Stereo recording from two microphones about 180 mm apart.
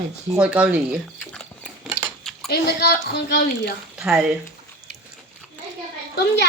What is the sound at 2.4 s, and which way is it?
Speech, 65° left (ahead or behind).